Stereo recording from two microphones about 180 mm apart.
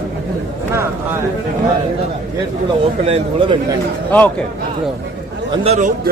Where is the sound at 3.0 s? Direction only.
35° right (ahead or behind).